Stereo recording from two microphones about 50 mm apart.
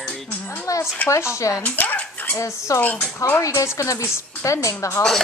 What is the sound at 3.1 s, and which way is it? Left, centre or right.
A woman's voice, left.